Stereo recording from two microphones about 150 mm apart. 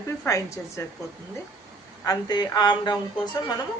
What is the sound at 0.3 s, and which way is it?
Speech, 20° left (ahead or behind).